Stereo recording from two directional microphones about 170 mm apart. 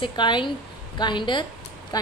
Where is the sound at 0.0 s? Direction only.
25° left (ahead or behind).